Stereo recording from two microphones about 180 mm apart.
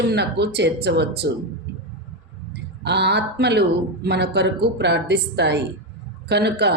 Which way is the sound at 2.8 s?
70° right (ahead or behind).